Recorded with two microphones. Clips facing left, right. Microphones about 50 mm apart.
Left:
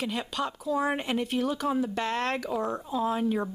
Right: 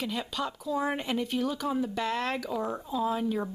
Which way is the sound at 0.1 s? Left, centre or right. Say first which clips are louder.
Left 2 dB; centre.